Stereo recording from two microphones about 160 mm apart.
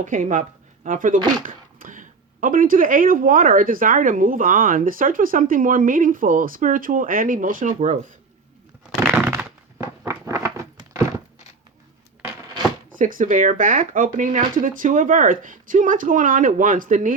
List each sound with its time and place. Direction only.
0.0 s speech: 55° right (ahead or behind)
9.0 s a sound: 10° right (ahead or behind)
13.0 s speech: 55° right (ahead or behind)